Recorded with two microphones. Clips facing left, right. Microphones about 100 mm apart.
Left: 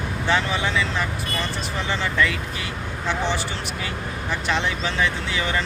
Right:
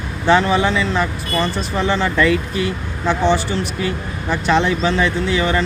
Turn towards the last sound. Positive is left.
turn(degrees=-45)  # may be behind; listen again after turning